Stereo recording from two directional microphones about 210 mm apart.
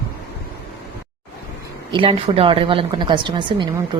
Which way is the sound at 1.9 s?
25° right (ahead or behind).